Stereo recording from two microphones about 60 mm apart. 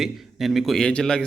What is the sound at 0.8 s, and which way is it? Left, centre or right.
Speech, centre.